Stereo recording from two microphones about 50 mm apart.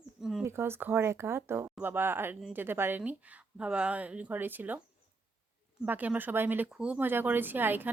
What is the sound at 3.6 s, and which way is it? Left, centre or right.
Speech, right.